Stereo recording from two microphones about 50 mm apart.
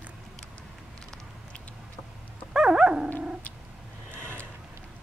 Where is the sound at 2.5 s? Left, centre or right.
Centre.